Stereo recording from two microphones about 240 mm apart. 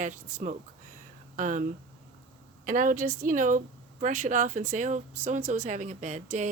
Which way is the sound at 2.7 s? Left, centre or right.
Right.